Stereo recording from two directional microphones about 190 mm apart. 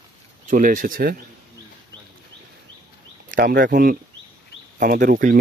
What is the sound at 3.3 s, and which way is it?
Speech, 45° right (ahead or behind).